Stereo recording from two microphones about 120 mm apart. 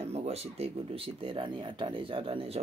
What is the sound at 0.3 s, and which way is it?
Speech, 55° right (ahead or behind).